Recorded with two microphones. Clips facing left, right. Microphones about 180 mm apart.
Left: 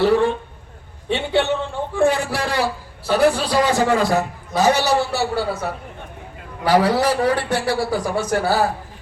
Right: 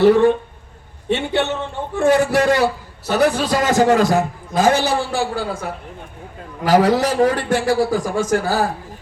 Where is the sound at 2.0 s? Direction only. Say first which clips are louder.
Right 11 dB; 45° right (ahead or behind).